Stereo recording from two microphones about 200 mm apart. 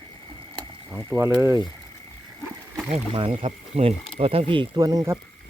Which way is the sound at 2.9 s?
30° right (ahead or behind).